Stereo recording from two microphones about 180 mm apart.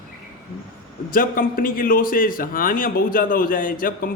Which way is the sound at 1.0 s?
50° left (ahead or behind).